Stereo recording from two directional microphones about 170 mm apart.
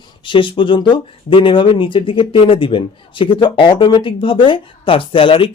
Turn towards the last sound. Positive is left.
turn(degrees=30)  # may be behind; listen again after turning